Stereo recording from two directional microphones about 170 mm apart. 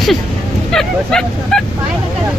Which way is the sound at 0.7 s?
5° left (ahead or behind).